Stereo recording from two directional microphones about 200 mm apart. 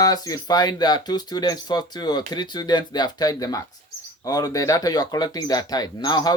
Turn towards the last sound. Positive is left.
turn(degrees=20)  # may be behind; listen again after turning